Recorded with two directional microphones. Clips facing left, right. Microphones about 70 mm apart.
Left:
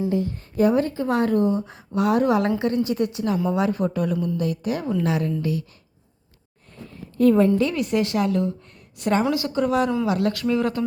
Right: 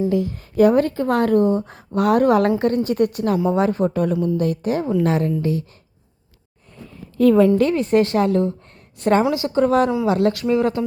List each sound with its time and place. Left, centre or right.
0.1 s speech: right
3.5 s speech: right
7.7 s speech: right
9.3 s speech: right
10.1 s speech: right